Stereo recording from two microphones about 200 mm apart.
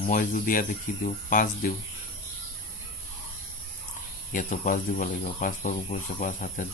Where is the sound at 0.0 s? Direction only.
45° left (ahead or behind).